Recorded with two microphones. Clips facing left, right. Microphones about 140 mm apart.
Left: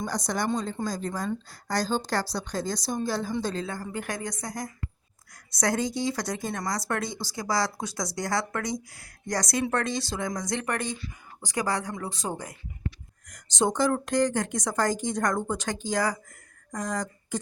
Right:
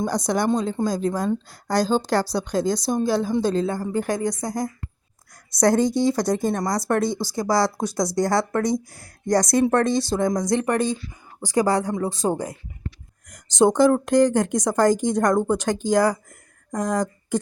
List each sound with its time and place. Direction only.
0.0 s a woman's voice: 65° right (ahead or behind)
3.6 s a woman's voice: 30° right (ahead or behind)
5.5 s speech: 50° right (ahead or behind); by 12.5 s 30° right (ahead or behind)
13.7 s speech: 55° right (ahead or behind)